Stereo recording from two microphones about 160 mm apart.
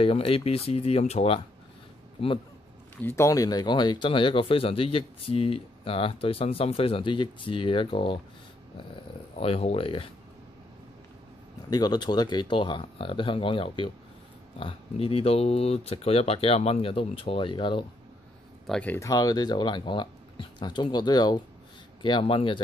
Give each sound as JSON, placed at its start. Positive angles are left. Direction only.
{"t": 0.0, "sound": "speech", "side_deg": 35}
{"t": 3.0, "sound": "speech", "side_deg": 15}
{"t": 9.4, "sound": "speech", "side_deg": 35}
{"t": 11.7, "sound": "speech", "side_deg": 25}
{"t": 18.7, "sound": "speech", "side_deg": 10}
{"t": 19.0, "sound": "speech", "side_deg": 25}